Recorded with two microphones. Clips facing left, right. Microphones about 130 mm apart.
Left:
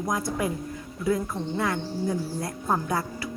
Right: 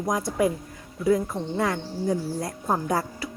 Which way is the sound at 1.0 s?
40° right (ahead or behind).